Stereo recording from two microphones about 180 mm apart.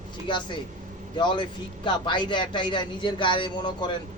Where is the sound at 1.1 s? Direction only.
25° left (ahead or behind).